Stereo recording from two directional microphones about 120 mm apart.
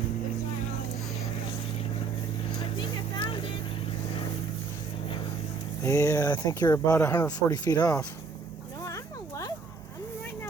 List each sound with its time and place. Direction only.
2.7 s music: 40° left (ahead or behind)
5.8 s speech: 25° left (ahead or behind)
7.3 s speech: 35° left (ahead or behind)
8.8 s a sound: 25° left (ahead or behind)